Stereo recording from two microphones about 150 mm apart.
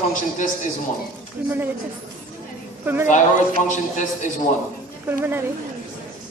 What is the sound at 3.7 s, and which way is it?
Speech, 55° left (ahead or behind).